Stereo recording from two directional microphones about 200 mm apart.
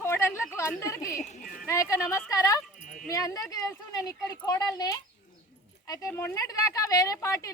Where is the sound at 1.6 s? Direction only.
15° left (ahead or behind).